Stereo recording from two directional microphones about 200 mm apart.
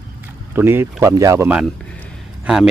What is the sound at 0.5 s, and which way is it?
Speech, 10° right (ahead or behind).